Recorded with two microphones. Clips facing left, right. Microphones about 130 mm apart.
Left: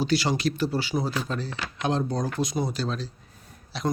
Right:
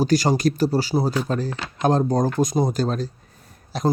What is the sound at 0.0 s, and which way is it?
Speech, 45° right (ahead or behind).